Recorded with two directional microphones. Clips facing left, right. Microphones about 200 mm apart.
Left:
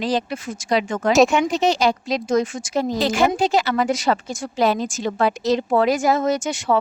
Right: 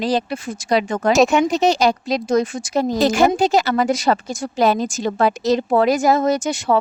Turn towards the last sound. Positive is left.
turn(degrees=-35)  # may be behind; listen again after turning